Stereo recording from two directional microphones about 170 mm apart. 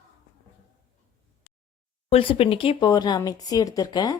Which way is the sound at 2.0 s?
35° left (ahead or behind).